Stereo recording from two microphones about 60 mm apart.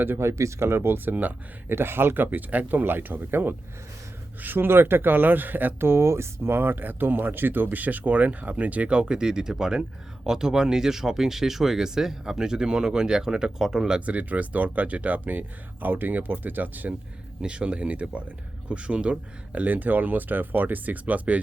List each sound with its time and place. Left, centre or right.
0.2 s speech: right; by 14.0 s centre
14.0 s speech: right
17.4 s speech: centre
19.6 s speech: right